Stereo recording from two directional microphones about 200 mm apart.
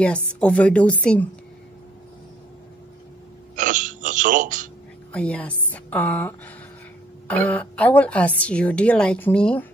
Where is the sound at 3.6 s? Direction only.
40° right (ahead or behind).